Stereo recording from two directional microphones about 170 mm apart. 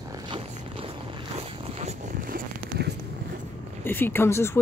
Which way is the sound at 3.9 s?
10° left (ahead or behind).